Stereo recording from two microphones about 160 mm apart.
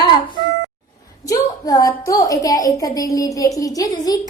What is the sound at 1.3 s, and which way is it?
A woman's voice, 20° left (ahead or behind).